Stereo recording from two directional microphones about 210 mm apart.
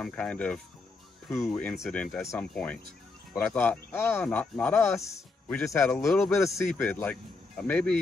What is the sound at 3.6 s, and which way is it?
Speech, 10° left (ahead or behind).